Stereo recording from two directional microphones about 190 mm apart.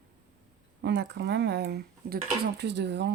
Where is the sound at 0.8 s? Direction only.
65° right (ahead or behind).